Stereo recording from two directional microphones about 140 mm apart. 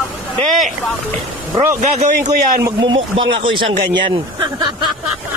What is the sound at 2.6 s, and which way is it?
A man's voice, 35° right (ahead or behind).